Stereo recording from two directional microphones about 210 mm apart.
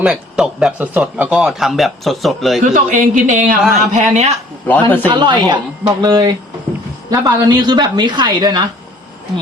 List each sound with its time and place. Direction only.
0.0 s speech: 5° right (ahead or behind)
2.7 s speech: 40° right (ahead or behind)
4.6 s a man's voice: 10° left (ahead or behind)
5.0 s a woman's voice: 20° right (ahead or behind)